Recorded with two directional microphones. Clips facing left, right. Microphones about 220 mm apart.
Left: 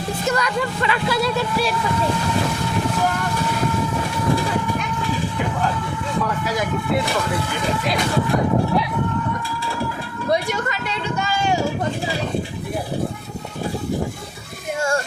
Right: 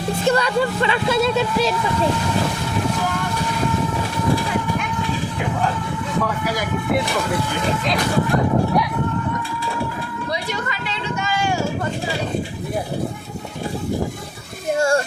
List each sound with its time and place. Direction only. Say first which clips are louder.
0.3 s speech: right 4 dB; 30° right (ahead or behind)